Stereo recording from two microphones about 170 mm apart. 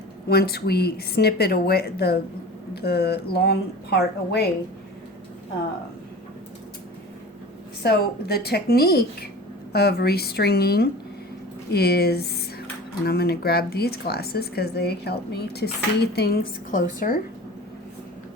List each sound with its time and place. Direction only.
0.3 s speech: 65° left (ahead or behind)
7.8 s a woman's voice: 65° left (ahead or behind)